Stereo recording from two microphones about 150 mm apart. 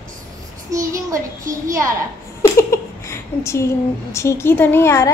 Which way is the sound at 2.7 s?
20° left (ahead or behind).